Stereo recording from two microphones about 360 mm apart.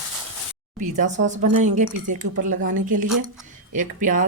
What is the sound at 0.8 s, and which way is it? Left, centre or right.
A woman's voice, centre.